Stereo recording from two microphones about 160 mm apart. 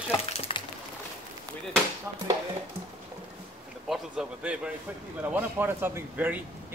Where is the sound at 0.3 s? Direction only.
35° left (ahead or behind).